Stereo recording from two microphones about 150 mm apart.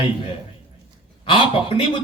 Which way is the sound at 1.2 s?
35° left (ahead or behind).